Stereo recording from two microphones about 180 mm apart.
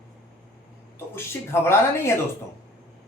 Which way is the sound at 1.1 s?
15° left (ahead or behind).